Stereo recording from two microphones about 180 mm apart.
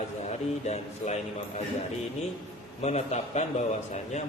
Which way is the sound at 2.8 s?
35° left (ahead or behind).